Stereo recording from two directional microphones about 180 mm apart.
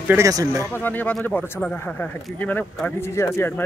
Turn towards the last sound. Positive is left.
turn(degrees=10)  # may be behind; listen again after turning